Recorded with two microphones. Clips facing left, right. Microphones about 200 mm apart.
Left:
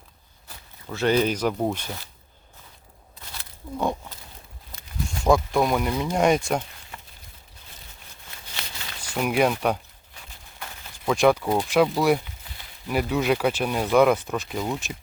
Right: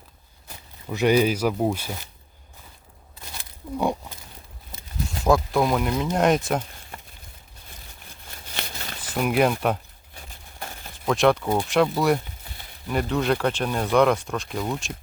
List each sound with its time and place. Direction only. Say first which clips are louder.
0.4 s speech: right 3 dB; 15° right (ahead or behind)
5.2 s speech: even; centre (ahead or behind)
8.3 s a sound: right 4 dB; 45° right (ahead or behind)
9.1 s speech: right 1 dB; centre (ahead or behind)
10.2 s a sound: right 3 dB; 45° right (ahead or behind)
10.9 s speech: even; centre (ahead or behind)